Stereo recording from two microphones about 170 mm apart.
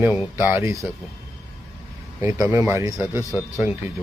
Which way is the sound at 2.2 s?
15° right (ahead or behind).